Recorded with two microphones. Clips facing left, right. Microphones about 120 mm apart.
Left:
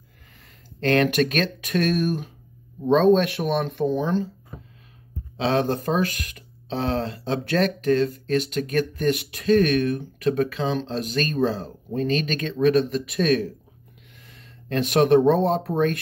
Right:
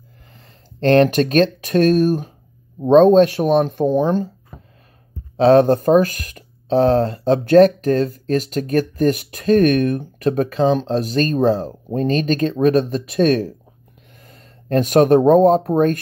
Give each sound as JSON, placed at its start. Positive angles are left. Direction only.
{"t": 0.7, "sound": "speech", "side_deg": -35}
{"t": 5.4, "sound": "speech", "side_deg": -45}